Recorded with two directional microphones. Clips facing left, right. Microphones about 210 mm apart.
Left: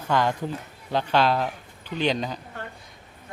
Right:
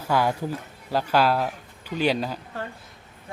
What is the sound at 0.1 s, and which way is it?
Speech, 10° right (ahead or behind).